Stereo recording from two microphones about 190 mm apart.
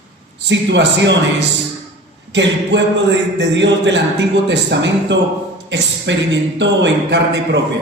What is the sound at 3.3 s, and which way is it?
Speech, 70° right (ahead or behind).